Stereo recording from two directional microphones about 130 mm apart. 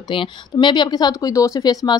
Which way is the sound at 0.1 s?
40° left (ahead or behind).